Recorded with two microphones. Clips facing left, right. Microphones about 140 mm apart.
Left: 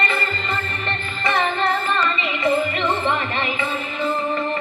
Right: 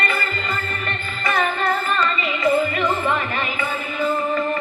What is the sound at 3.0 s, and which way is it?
Music, 25° left (ahead or behind).